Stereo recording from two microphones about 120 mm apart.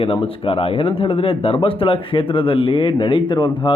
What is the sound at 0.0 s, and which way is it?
Speech, 50° left (ahead or behind).